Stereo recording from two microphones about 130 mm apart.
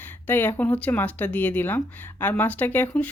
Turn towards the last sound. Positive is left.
turn(degrees=15)  # may be behind; listen again after turning